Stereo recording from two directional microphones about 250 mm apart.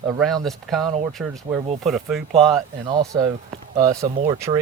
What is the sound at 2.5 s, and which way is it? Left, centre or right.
Speech, centre.